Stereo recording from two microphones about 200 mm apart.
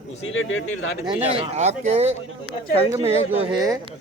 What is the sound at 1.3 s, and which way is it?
Speech, 30° right (ahead or behind).